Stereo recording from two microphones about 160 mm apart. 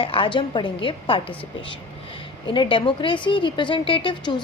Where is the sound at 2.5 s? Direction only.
30° left (ahead or behind).